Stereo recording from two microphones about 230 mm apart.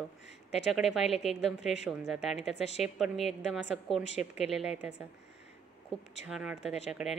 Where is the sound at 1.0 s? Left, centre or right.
Left.